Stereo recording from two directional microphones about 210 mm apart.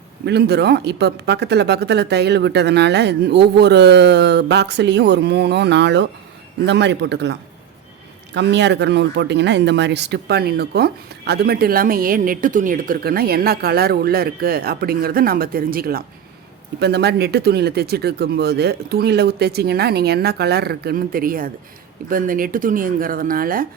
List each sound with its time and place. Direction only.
0.3 s speech: 50° right (ahead or behind)